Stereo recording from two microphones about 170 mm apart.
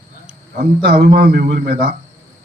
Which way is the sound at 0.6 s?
65° right (ahead or behind).